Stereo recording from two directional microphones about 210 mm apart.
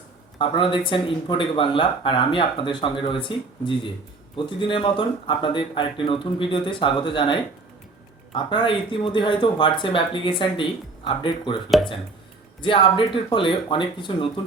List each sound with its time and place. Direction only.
0.3 s speech: 25° left (ahead or behind)
12.6 s speech: 25° left (ahead or behind)